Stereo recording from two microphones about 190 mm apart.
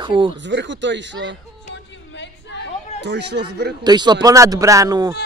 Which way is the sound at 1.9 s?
70° left (ahead or behind).